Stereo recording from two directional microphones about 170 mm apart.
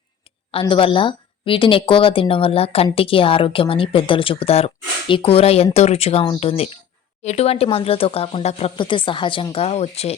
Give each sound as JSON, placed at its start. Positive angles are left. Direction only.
{"t": 0.3, "sound": "speech", "side_deg": 30}